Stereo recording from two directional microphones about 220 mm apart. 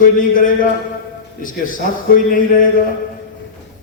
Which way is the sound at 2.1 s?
40° left (ahead or behind).